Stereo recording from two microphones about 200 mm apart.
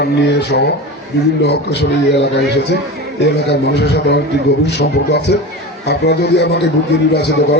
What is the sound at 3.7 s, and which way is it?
Speech, 55° left (ahead or behind).